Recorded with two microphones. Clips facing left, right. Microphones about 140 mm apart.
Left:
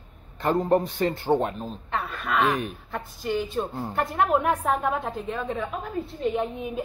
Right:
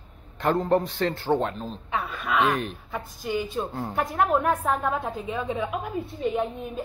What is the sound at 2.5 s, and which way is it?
Speech, 10° left (ahead or behind).